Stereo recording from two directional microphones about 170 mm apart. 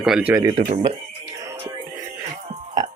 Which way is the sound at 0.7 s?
30° right (ahead or behind).